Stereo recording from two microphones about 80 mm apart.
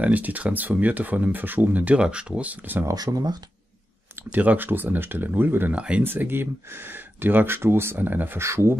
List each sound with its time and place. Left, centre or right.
0.0 s speech: right
2.8 s speech: right
4.3 s speech: right
5.8 s speech: centre
6.0 s speech: right